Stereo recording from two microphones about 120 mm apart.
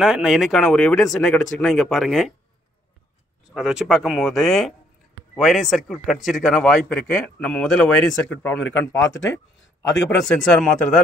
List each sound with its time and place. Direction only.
0.0 s a man's voice: 5° right (ahead or behind)
3.4 s a man's voice: 5° right (ahead or behind)